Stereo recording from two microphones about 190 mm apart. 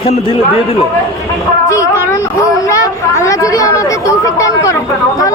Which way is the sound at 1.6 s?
15° left (ahead or behind).